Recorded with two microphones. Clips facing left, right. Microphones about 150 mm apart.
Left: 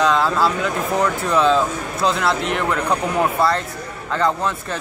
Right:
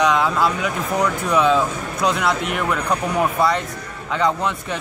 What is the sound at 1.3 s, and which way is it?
Speech, 10° right (ahead or behind).